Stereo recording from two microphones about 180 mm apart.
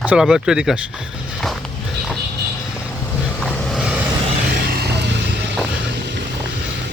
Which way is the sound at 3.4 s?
Centre (ahead or behind).